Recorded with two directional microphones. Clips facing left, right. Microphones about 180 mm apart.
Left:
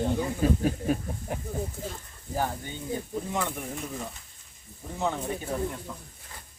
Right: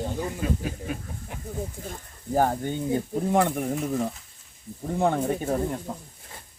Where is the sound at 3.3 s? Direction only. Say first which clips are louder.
Right 11 dB; 55° right (ahead or behind).